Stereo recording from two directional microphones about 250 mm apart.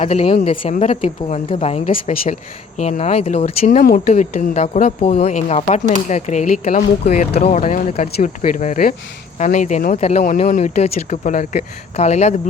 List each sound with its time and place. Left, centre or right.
0.0 s speech: left